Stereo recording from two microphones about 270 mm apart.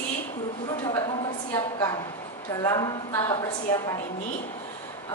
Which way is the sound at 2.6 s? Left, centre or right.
Centre.